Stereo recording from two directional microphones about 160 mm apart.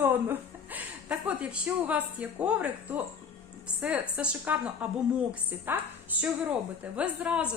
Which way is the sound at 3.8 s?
10° right (ahead or behind).